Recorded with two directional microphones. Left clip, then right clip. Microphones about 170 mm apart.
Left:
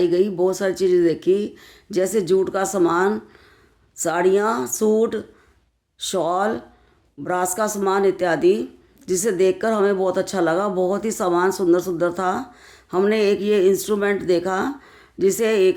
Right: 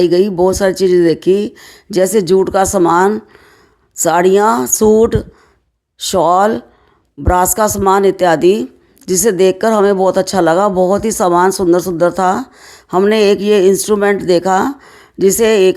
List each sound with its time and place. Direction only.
0.0 s speech: 50° right (ahead or behind)